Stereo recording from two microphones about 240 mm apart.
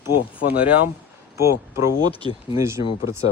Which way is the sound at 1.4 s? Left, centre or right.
Centre.